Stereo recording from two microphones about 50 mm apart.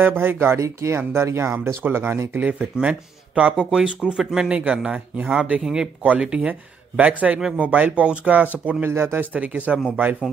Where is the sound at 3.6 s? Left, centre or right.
Centre.